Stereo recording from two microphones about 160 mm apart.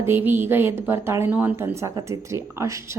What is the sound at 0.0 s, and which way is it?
A woman's voice, 15° right (ahead or behind).